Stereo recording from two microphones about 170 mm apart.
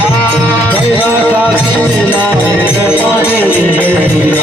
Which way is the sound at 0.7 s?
10° left (ahead or behind).